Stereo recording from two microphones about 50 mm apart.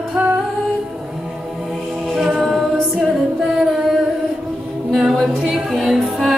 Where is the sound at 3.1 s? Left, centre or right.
Centre.